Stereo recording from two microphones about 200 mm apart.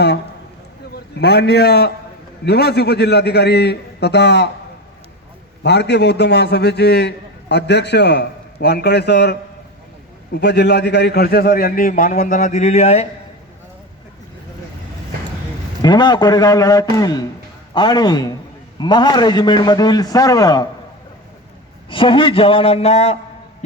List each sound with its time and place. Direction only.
1.2 s a man's voice: 55° left (ahead or behind)
5.6 s a man's voice: 55° left (ahead or behind); by 13.1 s 35° left (ahead or behind)
15.8 s a man's voice: 20° left (ahead or behind)
21.8 s a man's voice: 25° left (ahead or behind)